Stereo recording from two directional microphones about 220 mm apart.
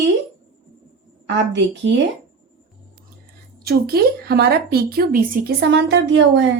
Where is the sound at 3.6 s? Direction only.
45° right (ahead or behind).